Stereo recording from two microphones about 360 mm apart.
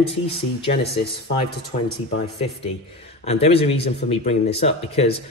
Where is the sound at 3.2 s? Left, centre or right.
Centre.